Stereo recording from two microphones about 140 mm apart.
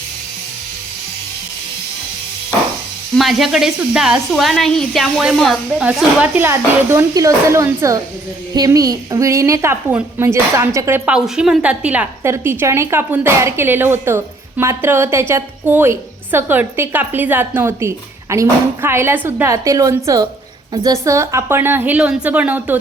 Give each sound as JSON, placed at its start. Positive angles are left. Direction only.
{"t": 3.2, "sound": "a woman's voice", "side_deg": 0}
{"t": 11.1, "sound": "a woman's voice", "side_deg": -5}